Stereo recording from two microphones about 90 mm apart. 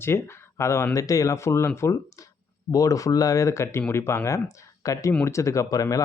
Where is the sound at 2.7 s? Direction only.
40° left (ahead or behind).